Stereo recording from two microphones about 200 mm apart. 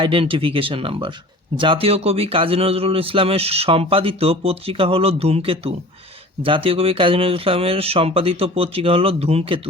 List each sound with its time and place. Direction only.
0.0 s a man's voice: 25° right (ahead or behind)